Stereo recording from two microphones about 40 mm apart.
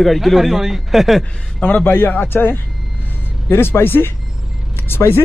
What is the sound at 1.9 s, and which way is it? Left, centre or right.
Speech, left.